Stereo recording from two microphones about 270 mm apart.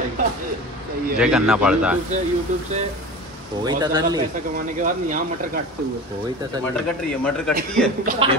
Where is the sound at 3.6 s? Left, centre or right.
Centre.